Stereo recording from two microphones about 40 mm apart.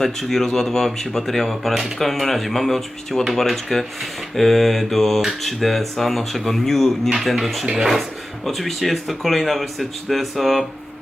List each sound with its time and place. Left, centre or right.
0.0 s speech: centre
7.3 s speech: centre
7.7 s speech: centre
8.4 s speech: centre